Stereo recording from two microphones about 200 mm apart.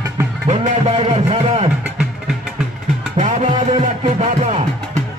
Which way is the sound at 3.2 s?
35° right (ahead or behind).